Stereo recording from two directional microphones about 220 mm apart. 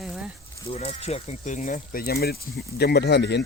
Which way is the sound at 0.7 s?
25° left (ahead or behind).